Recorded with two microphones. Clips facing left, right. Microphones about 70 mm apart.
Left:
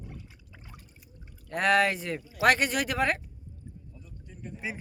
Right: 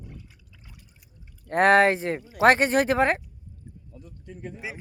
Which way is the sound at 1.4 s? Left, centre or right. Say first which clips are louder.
Right 6 dB; right.